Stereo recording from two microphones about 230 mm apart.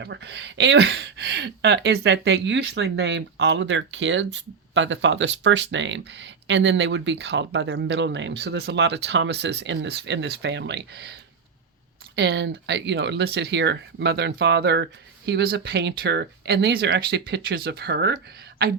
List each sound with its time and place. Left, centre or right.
0.0 s speech: right